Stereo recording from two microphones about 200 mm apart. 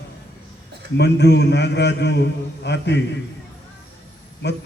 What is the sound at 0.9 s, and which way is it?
A man's voice, 60° left (ahead or behind).